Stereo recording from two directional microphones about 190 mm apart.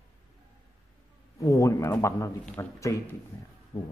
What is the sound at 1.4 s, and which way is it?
A man's voice, 15° left (ahead or behind).